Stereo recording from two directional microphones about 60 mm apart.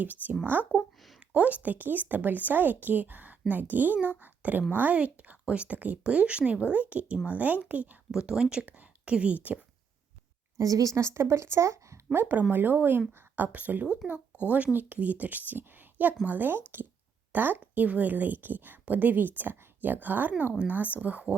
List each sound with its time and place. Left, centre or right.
0.0 s a woman's voice: right
0.7 s a woman's voice: centre
8.1 s a woman's voice: centre
10.6 s a woman's voice: right
12.1 s a woman's voice: right
14.0 s speech: centre
14.5 s a woman's voice: right